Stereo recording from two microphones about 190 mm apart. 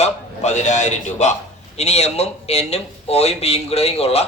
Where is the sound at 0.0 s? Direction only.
35° left (ahead or behind).